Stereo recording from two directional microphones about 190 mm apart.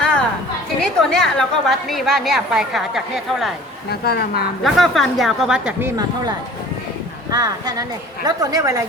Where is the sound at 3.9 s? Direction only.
55° left (ahead or behind).